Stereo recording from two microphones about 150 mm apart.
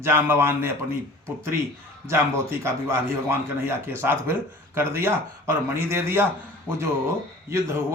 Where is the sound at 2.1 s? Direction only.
15° right (ahead or behind).